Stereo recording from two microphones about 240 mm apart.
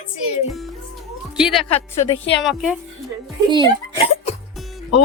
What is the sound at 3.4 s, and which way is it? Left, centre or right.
Speech, centre.